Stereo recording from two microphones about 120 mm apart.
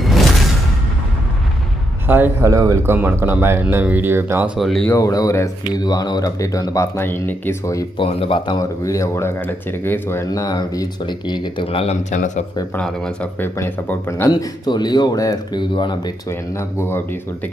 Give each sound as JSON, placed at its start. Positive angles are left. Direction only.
{"t": 2.0, "sound": "speech", "side_deg": -15}
{"t": 4.6, "sound": "speech", "side_deg": 0}
{"t": 4.9, "sound": "speech", "side_deg": 30}
{"t": 8.0, "sound": "speech", "side_deg": 50}
{"t": 8.5, "sound": "speech", "side_deg": 25}
{"t": 12.0, "sound": "speech", "side_deg": 85}
{"t": 12.7, "sound": "speech", "side_deg": 10}
{"t": 14.3, "sound": "speech", "side_deg": 35}
{"t": 16.3, "sound": "speech", "side_deg": 20}